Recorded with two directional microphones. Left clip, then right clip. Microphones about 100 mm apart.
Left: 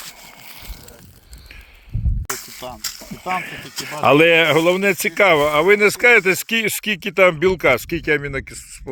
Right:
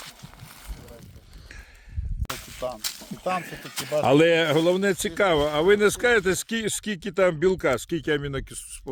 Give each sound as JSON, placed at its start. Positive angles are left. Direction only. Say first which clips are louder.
{"t": 2.8, "sound": "speech", "louder": "left 2 dB", "side_deg": 15}
{"t": 3.4, "sound": "speech", "louder": "left 5 dB", "side_deg": 5}
{"t": 5.4, "sound": "speech", "louder": "left 6 dB", "side_deg": -5}